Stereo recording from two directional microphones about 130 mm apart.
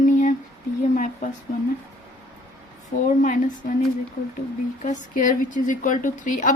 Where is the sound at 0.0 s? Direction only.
85° left.